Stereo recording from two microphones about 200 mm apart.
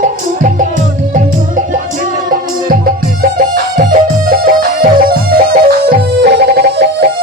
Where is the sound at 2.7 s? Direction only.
45° right (ahead or behind).